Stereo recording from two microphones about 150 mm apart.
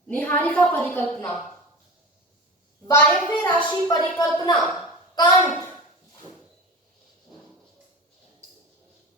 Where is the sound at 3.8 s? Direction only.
25° left (ahead or behind).